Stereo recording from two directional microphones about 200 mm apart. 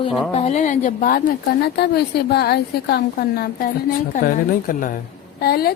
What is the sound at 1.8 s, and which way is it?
Speech, 55° left (ahead or behind).